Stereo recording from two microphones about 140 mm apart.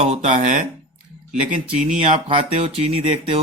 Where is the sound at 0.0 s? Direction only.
55° right (ahead or behind).